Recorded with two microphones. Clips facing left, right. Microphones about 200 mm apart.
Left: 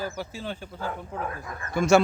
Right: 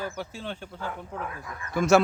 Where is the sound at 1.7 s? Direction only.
Centre (ahead or behind).